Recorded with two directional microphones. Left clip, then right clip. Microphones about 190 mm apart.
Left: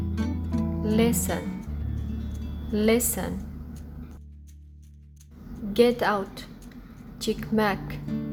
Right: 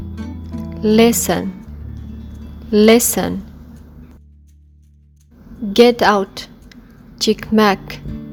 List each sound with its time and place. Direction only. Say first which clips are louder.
0.1 s music: even; centre (ahead or behind)
0.8 s a woman's voice: right 13 dB; 55° right (ahead or behind)
1.6 s music: right 1 dB; centre (ahead or behind)
2.7 s a woman's voice: right 13 dB; 50° right (ahead or behind)
5.7 s a woman's voice: right 11 dB; 50° right (ahead or behind)
8.0 s music: right 1 dB; centre (ahead or behind)